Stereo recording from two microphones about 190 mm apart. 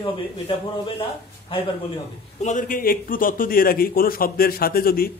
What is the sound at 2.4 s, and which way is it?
A man's voice, 40° left (ahead or behind).